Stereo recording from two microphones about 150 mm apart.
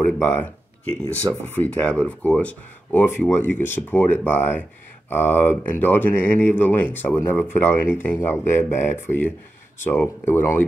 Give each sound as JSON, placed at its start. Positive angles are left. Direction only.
{"t": 0.2, "sound": "speech", "side_deg": 15}